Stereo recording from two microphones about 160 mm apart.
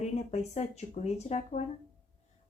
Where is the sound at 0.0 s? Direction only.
45° left (ahead or behind).